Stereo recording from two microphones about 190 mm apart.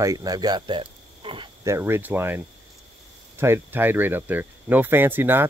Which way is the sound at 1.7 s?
10° right (ahead or behind).